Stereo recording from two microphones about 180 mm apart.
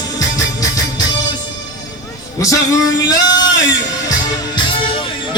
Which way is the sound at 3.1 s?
25° left (ahead or behind).